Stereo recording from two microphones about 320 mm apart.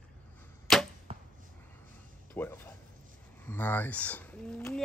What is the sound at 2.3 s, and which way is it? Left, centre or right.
Speech, centre.